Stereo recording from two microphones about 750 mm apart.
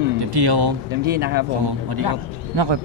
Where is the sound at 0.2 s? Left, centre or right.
Right.